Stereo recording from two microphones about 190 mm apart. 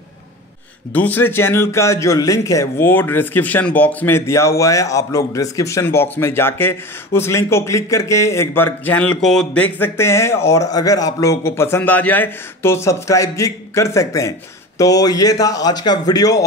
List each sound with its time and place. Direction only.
0.9 s a man's voice: 10° left (ahead or behind)